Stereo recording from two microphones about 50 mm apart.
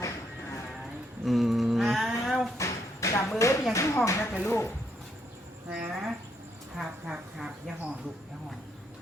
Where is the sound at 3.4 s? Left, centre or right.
Left.